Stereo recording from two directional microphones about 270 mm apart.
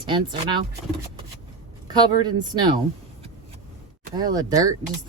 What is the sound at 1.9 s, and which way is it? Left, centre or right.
Speech, centre.